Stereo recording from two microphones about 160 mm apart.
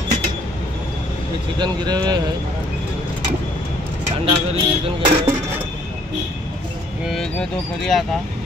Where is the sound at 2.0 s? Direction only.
25° right (ahead or behind).